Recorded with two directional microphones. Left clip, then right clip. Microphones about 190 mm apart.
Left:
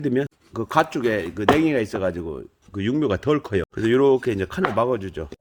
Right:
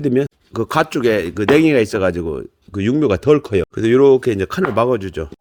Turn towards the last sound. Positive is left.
turn(degrees=-35)  # may be behind; listen again after turning